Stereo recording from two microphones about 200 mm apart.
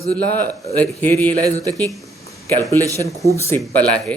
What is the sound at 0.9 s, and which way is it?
Speech, 10° left (ahead or behind).